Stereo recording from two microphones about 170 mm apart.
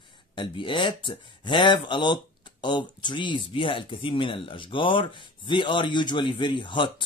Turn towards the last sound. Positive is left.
turn(degrees=30)  # may be behind; listen again after turning